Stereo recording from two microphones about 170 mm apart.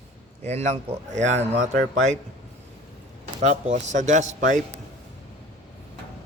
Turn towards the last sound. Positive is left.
turn(degrees=-45)  # may be behind; listen again after turning